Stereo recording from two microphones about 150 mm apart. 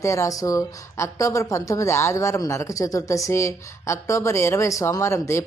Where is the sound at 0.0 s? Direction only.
20° left (ahead or behind).